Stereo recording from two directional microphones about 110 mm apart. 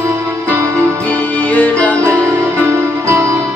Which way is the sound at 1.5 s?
15° left (ahead or behind).